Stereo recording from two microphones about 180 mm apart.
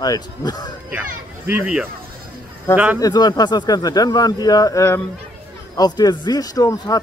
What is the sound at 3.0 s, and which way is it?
A man's voice, 20° left (ahead or behind).